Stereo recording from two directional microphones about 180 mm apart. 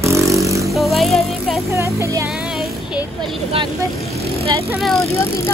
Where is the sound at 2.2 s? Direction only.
Centre (ahead or behind).